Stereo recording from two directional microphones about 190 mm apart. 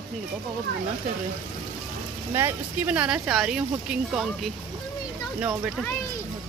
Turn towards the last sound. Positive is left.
turn(degrees=-5)  # may be behind; listen again after turning